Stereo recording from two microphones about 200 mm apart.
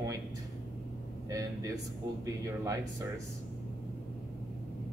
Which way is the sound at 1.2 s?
15° right (ahead or behind).